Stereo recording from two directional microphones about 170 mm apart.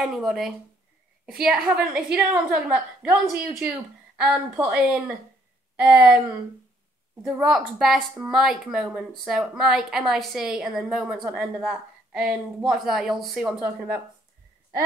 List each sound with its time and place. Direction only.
0.1 s a woman's voice: centre (ahead or behind)
3.1 s a woman's voice: 15° right (ahead or behind)
7.2 s a woman's voice: 5° right (ahead or behind)